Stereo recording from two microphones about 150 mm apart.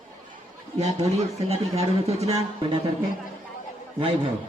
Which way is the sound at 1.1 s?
45° right (ahead or behind).